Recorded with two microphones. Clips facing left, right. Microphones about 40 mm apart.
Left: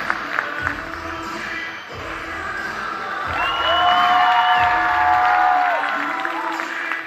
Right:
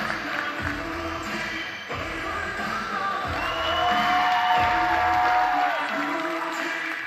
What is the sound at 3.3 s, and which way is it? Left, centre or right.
Music, left.